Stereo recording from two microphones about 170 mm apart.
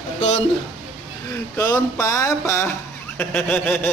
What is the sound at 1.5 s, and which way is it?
A man's voice, 10° left (ahead or behind).